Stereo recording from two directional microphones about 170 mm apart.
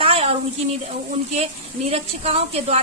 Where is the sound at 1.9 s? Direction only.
35° right (ahead or behind).